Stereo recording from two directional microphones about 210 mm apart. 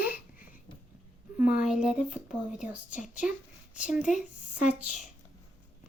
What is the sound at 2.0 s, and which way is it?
Speech, 35° left (ahead or behind).